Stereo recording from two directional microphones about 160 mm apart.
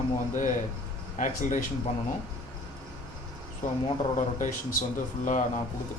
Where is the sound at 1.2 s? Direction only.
55° left (ahead or behind).